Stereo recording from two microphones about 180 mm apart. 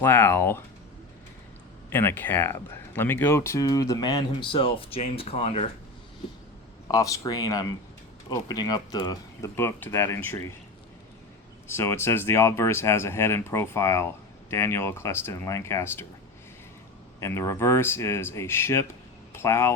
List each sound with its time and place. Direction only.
0.0 s speech: 10° left (ahead or behind)
1.9 s speech: 10° left (ahead or behind); by 5.7 s 35° left (ahead or behind)
6.8 s speech: 20° left (ahead or behind)
11.7 s speech: 15° left (ahead or behind)
17.2 s speech: 15° left (ahead or behind)